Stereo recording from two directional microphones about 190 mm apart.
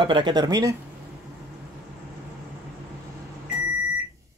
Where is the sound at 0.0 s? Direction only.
25° right (ahead or behind).